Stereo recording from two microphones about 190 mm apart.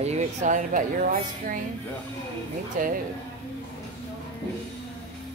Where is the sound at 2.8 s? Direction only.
45° right (ahead or behind).